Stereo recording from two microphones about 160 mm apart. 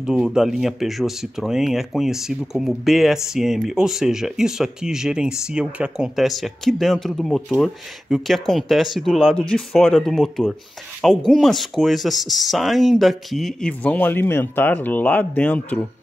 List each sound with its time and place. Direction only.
0.0 s speech: 5° right (ahead or behind)